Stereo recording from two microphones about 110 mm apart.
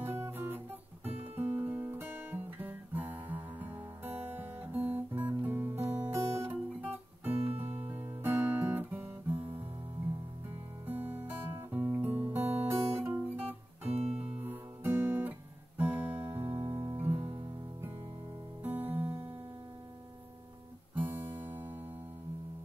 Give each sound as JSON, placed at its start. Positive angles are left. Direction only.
{"t": 0.0, "sound": "guitar", "side_deg": -20}
{"t": 6.5, "sound": "music", "side_deg": -15}
{"t": 7.4, "sound": "music", "side_deg": -60}
{"t": 7.9, "sound": "guitar", "side_deg": -20}
{"t": 10.9, "sound": "music", "side_deg": -15}
{"t": 12.3, "sound": "guitar", "side_deg": -20}
{"t": 13.9, "sound": "music", "side_deg": -65}
{"t": 14.2, "sound": "guitar", "side_deg": -15}
{"t": 16.4, "sound": "music", "side_deg": -40}
{"t": 16.9, "sound": "music", "side_deg": -20}
{"t": 18.6, "sound": "music", "side_deg": -15}
{"t": 20.9, "sound": "guitar", "side_deg": -20}